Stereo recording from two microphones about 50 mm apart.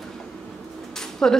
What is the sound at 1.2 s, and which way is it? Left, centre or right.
Speech, centre.